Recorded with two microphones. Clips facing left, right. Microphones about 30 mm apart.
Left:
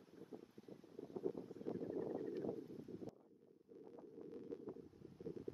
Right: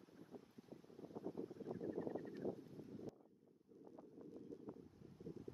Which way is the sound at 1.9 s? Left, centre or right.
Centre.